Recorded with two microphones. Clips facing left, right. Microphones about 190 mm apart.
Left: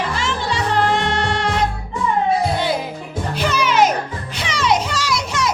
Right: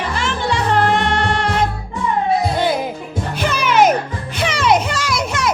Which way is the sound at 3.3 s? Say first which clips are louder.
Right 1 dB; 55° right (ahead or behind).